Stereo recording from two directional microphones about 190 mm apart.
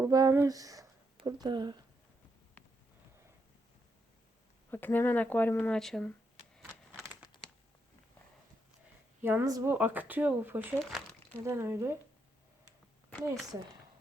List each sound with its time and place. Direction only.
0.0 s speech: 15° right (ahead or behind)
4.7 s speech: 10° left (ahead or behind)
9.2 s speech: 15° right (ahead or behind)